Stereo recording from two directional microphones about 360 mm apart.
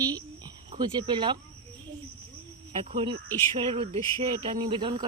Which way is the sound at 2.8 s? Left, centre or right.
Centre.